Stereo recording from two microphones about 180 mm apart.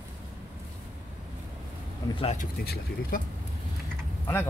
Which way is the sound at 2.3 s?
55° left (ahead or behind).